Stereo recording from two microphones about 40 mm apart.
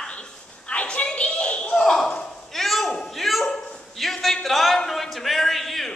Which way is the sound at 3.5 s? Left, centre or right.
Centre.